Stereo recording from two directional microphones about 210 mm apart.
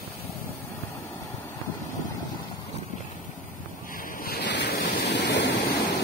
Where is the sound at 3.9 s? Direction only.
40° left (ahead or behind).